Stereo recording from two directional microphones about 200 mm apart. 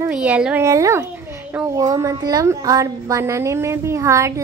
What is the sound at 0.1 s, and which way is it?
A woman's voice, 5° right (ahead or behind).